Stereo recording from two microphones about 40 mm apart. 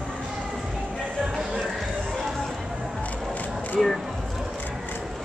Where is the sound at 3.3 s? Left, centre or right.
Left.